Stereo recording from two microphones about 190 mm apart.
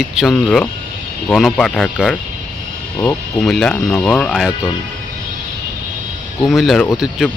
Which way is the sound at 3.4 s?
5° left (ahead or behind).